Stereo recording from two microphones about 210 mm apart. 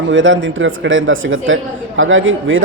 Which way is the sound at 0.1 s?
65° right (ahead or behind).